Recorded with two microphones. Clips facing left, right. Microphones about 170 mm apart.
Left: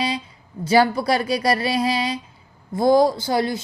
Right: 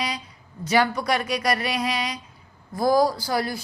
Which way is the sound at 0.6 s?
30° left (ahead or behind).